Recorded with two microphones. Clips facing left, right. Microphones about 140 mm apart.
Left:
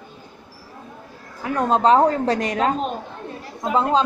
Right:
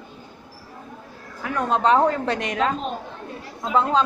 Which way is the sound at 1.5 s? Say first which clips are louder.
Left 3 dB; 35° left (ahead or behind).